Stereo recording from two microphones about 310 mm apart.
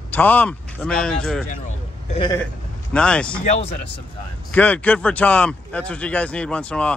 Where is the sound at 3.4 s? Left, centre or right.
Left.